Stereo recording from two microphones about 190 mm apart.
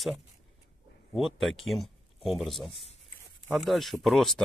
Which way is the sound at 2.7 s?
30° left (ahead or behind).